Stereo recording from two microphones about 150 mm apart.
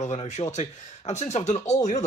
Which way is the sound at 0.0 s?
50° left (ahead or behind).